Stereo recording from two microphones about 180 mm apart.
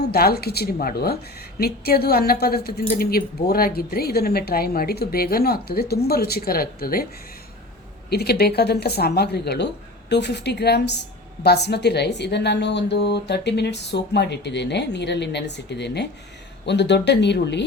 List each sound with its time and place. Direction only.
0.1 s a woman's voice: 60° left (ahead or behind)
8.1 s a woman's voice: 65° left (ahead or behind)